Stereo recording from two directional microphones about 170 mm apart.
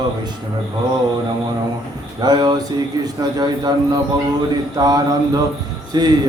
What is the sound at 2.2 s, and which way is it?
Mantra, 25° right (ahead or behind).